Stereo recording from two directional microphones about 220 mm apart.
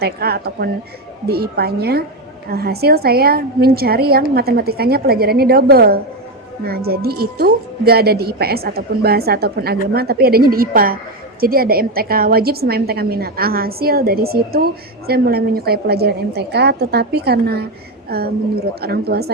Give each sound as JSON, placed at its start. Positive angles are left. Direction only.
{"t": 0.0, "sound": "a woman's voice", "side_deg": -45}